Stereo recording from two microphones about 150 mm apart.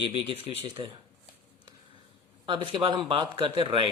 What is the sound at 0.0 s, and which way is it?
Speech, 40° right (ahead or behind).